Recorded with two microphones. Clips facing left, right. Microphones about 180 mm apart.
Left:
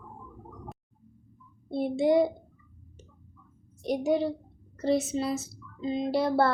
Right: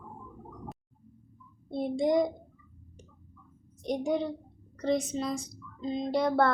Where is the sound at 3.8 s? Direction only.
5° left (ahead or behind).